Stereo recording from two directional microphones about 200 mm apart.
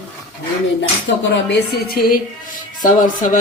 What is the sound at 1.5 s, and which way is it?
A woman's voice, 50° left (ahead or behind).